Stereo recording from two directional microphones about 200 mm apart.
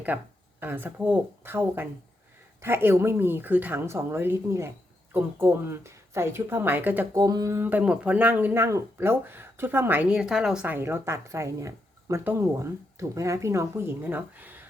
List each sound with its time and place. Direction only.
0.1 s speech: 10° right (ahead or behind)